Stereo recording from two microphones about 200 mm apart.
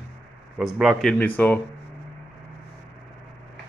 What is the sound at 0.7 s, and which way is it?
Speech, 5° right (ahead or behind).